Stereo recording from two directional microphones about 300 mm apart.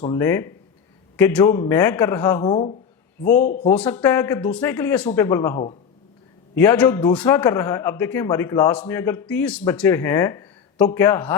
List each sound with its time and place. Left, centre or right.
0.1 s a man's voice: centre
3.3 s speech: left
3.7 s a man's voice: centre